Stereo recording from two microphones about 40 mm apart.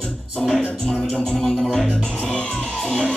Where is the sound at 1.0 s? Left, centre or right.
Left.